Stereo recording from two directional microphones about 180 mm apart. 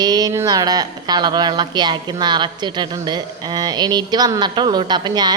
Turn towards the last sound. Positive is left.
turn(degrees=-25)  # may be behind; listen again after turning